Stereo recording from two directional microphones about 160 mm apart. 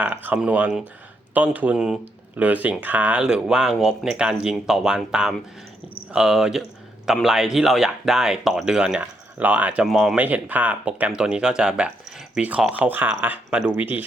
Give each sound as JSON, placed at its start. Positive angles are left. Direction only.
{"t": 0.0, "sound": "speech", "side_deg": -10}